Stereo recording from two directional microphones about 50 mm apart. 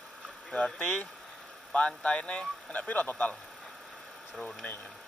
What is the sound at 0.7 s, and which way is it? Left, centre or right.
A man's voice, left.